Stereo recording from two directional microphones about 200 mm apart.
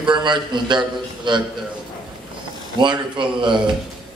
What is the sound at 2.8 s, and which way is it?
Speech, 25° right (ahead or behind).